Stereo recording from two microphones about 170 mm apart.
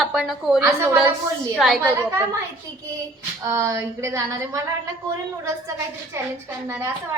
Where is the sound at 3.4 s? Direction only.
20° right (ahead or behind).